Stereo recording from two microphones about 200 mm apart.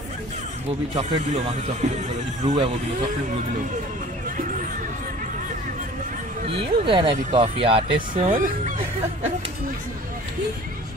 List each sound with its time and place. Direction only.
0.9 s speech: 35° right (ahead or behind)
6.4 s speech: 30° right (ahead or behind)
8.1 s speech: 40° right (ahead or behind)